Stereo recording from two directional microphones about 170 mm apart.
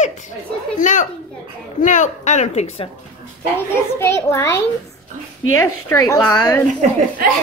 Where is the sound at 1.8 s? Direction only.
45° left (ahead or behind).